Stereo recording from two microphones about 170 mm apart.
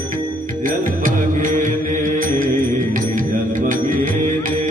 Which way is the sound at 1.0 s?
50° right (ahead or behind).